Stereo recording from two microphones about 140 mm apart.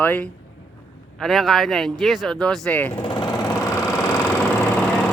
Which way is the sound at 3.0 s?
35° left (ahead or behind).